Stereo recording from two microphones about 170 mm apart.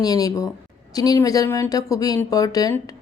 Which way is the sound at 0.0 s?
20° left (ahead or behind).